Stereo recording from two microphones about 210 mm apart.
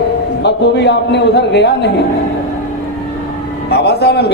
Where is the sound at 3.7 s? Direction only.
50° left (ahead or behind).